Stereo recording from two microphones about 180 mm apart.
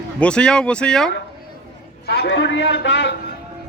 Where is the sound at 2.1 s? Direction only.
75° left (ahead or behind).